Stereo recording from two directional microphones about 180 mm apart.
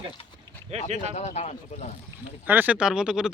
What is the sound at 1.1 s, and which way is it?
Speech, 40° left (ahead or behind).